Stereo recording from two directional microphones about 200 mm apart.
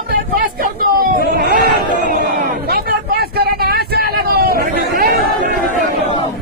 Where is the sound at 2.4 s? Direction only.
50° right (ahead or behind).